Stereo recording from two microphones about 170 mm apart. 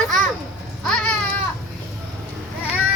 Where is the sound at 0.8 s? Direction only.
5° left (ahead or behind).